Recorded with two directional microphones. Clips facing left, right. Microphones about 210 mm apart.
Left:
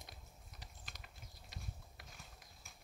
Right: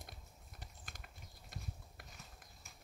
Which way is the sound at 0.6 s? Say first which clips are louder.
Right 2 dB; 50° right (ahead or behind).